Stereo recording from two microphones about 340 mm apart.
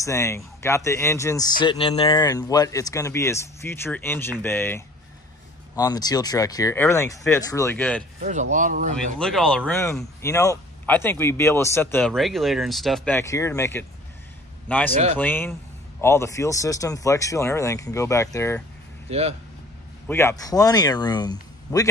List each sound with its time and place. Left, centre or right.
0.0 s speech: centre
8.2 s speech: right
8.9 s speech: centre
19.0 s speech: centre
20.1 s speech: centre